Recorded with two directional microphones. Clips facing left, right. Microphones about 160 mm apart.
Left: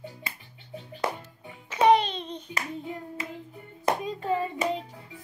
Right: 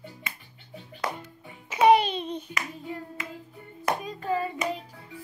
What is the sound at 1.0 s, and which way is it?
Music, 25° left (ahead or behind).